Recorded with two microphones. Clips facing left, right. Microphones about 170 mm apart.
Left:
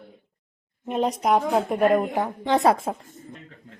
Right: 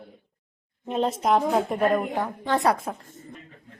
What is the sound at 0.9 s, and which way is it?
Speech, 5° left (ahead or behind).